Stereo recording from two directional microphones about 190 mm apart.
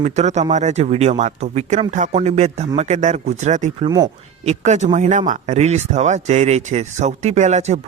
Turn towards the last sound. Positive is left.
turn(degrees=-35)  # may be behind; listen again after turning